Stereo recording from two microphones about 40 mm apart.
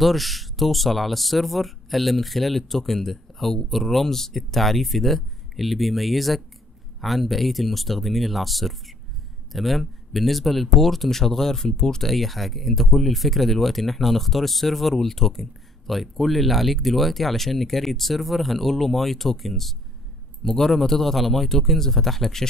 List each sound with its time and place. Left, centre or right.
0.0 s speech: centre
11.6 s speech: left
12.0 s a man's voice: centre